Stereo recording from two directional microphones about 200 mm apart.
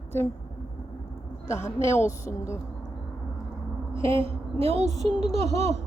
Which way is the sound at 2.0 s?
15° left (ahead or behind).